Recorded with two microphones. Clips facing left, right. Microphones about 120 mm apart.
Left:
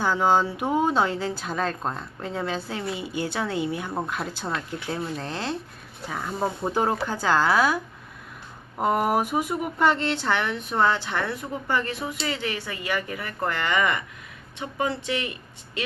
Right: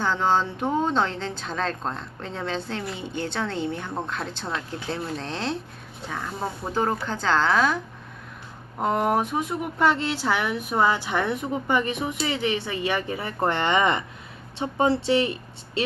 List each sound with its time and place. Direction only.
0.0 s speech: 10° left (ahead or behind)
8.8 s speech: 5° left (ahead or behind); by 15.8 s 30° right (ahead or behind)